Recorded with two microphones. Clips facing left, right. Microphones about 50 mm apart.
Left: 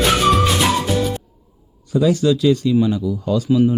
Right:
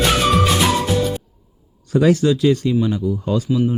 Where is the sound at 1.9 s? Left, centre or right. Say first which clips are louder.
Right 2 dB; right.